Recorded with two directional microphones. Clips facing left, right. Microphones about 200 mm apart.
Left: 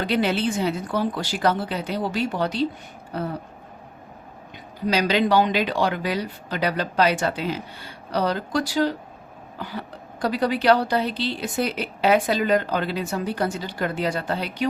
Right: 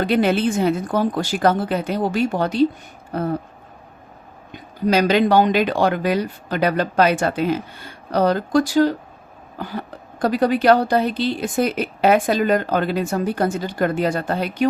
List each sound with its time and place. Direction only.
0.0 s a woman's voice: 50° right (ahead or behind)
4.5 s a woman's voice: 50° right (ahead or behind)